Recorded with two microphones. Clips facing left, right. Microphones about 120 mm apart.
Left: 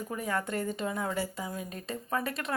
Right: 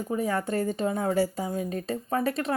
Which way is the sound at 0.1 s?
30° right (ahead or behind).